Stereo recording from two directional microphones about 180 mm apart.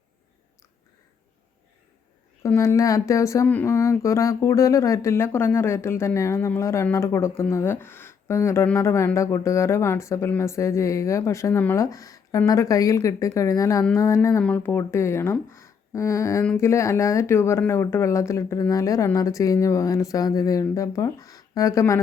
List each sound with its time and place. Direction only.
2.4 s speech: 15° left (ahead or behind)